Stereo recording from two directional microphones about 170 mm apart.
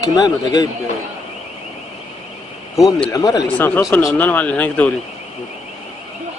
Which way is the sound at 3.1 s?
20° left (ahead or behind).